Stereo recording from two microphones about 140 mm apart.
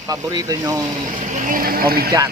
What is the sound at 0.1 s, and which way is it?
Speech, 25° right (ahead or behind).